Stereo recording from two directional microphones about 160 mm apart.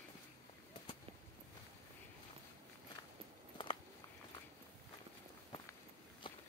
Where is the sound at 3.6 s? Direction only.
30° left (ahead or behind).